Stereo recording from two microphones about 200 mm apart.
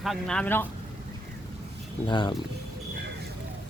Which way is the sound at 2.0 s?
25° left (ahead or behind).